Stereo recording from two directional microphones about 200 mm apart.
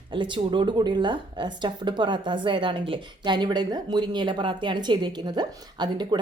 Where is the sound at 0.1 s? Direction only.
25° right (ahead or behind).